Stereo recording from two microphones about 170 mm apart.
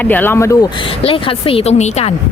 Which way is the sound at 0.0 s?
10° left (ahead or behind).